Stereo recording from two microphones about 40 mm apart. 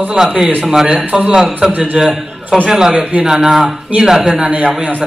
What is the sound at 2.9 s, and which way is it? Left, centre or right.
Speech, right.